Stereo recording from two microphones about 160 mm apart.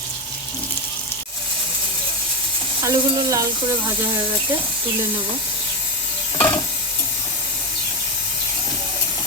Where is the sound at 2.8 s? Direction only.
20° right (ahead or behind).